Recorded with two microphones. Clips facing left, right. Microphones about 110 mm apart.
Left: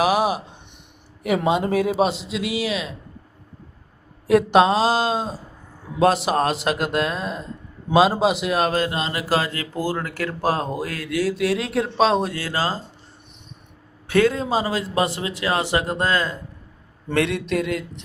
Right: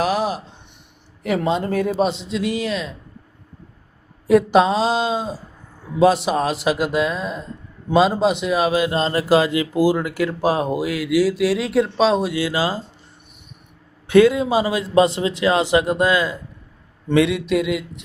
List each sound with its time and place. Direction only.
0.0 s a sound: 10° left (ahead or behind)
1.2 s a man's voice: 15° left (ahead or behind)
4.3 s a man's voice: centre (ahead or behind)
8.9 s speech: 30° right (ahead or behind)
9.3 s speech: 15° right (ahead or behind); by 12.3 s centre (ahead or behind)
12.3 s speech: 15° right (ahead or behind)
14.1 s speech: 15° right (ahead or behind)
17.2 s a man's voice: centre (ahead or behind)